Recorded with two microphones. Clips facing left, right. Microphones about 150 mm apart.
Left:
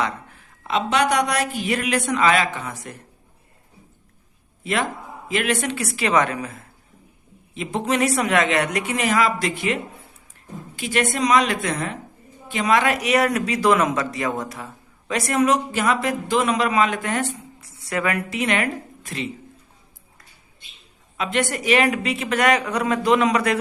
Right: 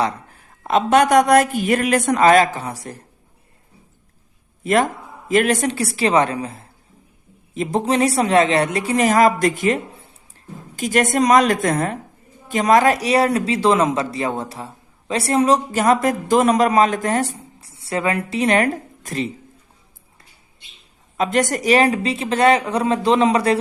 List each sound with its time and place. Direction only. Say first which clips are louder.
0.0 s a man's voice: right 4 dB; 40° right (ahead or behind)
4.6 s a man's voice: right 7 dB; 45° right (ahead or behind)
21.2 s speech: right 5 dB; 40° right (ahead or behind)